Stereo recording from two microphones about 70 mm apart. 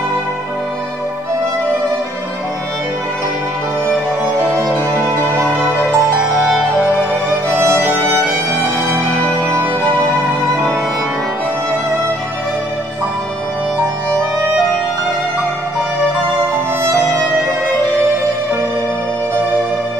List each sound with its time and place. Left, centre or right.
4.9 s music: right
8.3 s music: right